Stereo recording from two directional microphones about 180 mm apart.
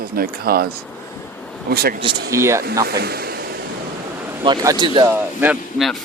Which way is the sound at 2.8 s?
60° right (ahead or behind).